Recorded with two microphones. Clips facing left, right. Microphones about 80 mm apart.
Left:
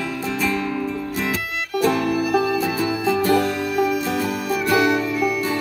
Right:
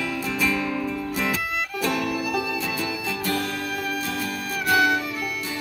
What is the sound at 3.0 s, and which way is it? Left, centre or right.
Music, left.